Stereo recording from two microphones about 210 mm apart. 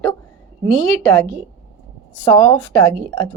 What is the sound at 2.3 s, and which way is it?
A woman's voice, 15° left (ahead or behind).